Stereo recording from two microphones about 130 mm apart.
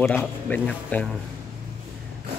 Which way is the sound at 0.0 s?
10° left (ahead or behind).